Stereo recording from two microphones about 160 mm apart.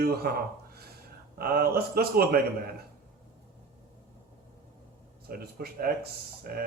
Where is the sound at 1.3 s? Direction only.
70° right (ahead or behind).